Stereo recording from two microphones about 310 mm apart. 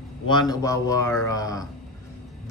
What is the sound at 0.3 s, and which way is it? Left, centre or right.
Speech, centre.